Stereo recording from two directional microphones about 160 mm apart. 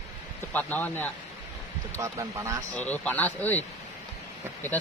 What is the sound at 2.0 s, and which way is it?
Speech, 20° right (ahead or behind).